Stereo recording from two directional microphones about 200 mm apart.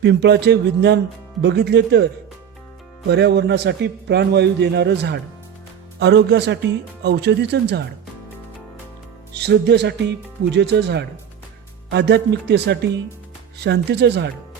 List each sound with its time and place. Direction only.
0.0 s a man's voice: 60° right (ahead or behind)
3.1 s a man's voice: 60° right (ahead or behind)
9.3 s a man's voice: 60° right (ahead or behind)